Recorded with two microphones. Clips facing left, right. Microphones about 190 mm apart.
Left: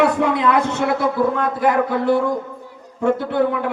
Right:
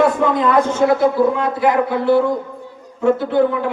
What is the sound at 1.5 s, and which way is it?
A man's voice, 50° left (ahead or behind).